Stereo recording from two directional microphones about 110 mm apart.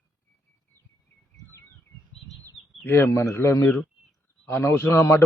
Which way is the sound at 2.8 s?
20° left (ahead or behind).